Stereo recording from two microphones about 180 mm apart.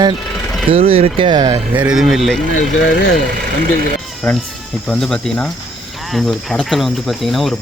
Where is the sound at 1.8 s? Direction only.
5° right (ahead or behind).